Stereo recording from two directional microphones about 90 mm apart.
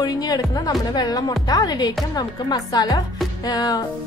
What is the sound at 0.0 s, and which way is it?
A woman's voice, 45° left (ahead or behind).